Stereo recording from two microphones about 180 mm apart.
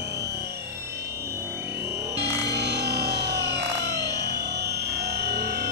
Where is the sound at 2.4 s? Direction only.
65° right (ahead or behind).